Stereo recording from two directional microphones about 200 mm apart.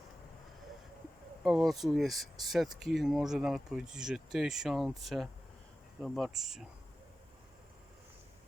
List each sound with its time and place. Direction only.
1.5 s speech: centre (ahead or behind)